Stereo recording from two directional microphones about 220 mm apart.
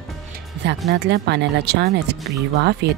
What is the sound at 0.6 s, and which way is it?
Music, 50° right (ahead or behind).